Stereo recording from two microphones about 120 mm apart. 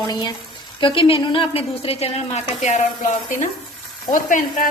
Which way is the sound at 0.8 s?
45° left (ahead or behind).